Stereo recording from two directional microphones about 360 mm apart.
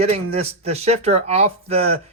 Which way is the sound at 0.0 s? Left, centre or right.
Centre.